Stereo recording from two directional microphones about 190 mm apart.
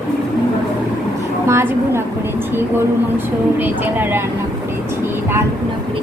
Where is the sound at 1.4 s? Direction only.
15° right (ahead or behind).